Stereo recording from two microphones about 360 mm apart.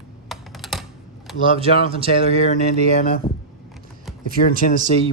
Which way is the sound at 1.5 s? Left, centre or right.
Centre.